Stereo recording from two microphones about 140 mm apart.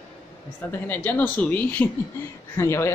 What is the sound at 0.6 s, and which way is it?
Speech, 15° left (ahead or behind).